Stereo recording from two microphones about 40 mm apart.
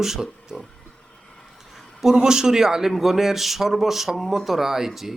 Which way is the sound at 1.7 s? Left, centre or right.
Centre.